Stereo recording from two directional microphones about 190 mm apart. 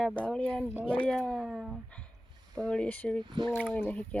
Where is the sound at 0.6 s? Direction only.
5° right (ahead or behind).